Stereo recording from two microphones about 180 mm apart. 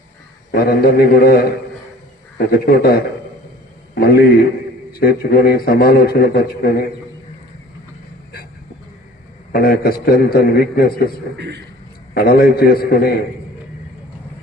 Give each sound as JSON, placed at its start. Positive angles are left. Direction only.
{"t": 0.5, "sound": "a man's voice", "side_deg": 55}
{"t": 9.5, "sound": "a man's voice", "side_deg": 55}
{"t": 11.3, "sound": "a man's voice", "side_deg": -70}
{"t": 12.1, "sound": "a man's voice", "side_deg": 55}